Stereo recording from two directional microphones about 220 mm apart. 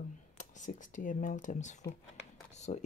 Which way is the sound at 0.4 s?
35° left (ahead or behind).